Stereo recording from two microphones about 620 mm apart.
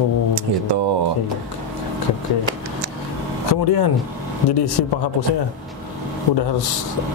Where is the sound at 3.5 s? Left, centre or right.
Left.